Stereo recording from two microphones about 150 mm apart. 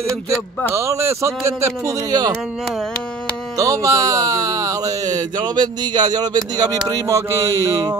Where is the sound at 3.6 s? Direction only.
20° right (ahead or behind).